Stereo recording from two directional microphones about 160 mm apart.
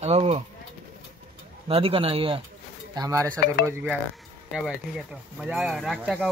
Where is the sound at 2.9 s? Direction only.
25° right (ahead or behind).